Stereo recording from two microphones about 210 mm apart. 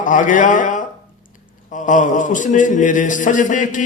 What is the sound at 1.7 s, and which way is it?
A man's voice, 35° left (ahead or behind).